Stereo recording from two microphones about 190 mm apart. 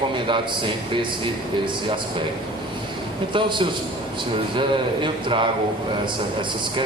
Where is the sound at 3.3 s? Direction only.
25° right (ahead or behind).